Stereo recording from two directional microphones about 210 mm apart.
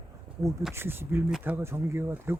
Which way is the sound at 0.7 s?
10° right (ahead or behind).